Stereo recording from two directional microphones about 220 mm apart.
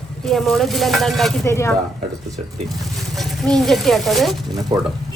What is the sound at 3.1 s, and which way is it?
Speech, centre (ahead or behind).